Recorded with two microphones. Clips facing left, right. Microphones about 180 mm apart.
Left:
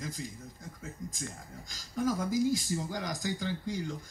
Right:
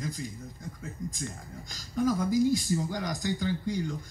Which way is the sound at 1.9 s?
5° left (ahead or behind).